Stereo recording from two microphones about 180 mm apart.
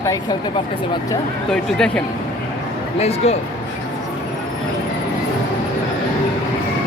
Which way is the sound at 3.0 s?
35° left (ahead or behind).